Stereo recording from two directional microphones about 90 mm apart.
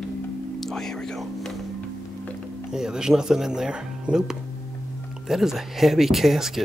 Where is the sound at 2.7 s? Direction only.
5° right (ahead or behind).